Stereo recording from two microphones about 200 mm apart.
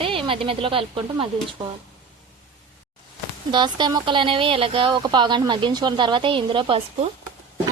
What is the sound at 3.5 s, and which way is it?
Speech, 25° right (ahead or behind).